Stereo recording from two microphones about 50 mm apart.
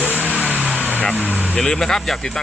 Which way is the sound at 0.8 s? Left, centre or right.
Left.